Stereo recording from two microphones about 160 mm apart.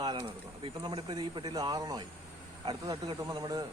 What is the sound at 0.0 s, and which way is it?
Speech, 30° right (ahead or behind).